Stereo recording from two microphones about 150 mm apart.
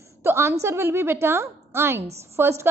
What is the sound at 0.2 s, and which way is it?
A woman's voice, 15° right (ahead or behind).